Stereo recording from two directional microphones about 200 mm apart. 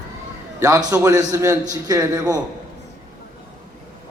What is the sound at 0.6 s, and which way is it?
A man's voice, 15° right (ahead or behind).